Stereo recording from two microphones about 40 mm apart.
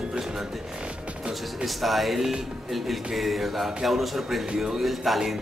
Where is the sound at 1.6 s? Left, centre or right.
Centre.